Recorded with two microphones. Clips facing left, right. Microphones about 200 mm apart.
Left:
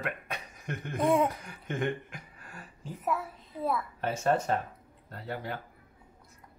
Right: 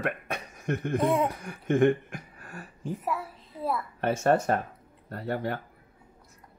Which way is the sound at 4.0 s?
65° right (ahead or behind).